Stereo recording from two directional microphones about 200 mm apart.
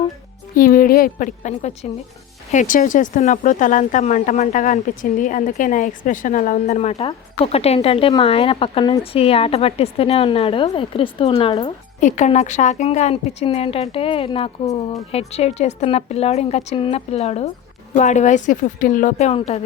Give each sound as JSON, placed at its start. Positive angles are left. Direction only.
{"t": 0.5, "sound": "a woman's voice", "side_deg": 45}
{"t": 11.9, "sound": "a woman's voice", "side_deg": 35}